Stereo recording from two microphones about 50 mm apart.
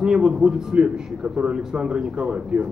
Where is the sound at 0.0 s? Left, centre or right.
Centre.